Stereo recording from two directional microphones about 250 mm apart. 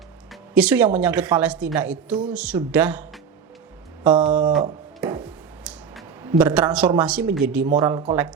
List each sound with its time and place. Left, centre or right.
0.5 s a woman's voice: centre
4.4 s speech: centre
5.0 s a sound: centre
6.4 s a woman's voice: centre
7.8 s speech: centre